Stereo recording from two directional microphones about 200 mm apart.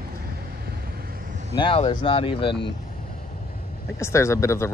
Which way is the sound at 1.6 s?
25° left (ahead or behind).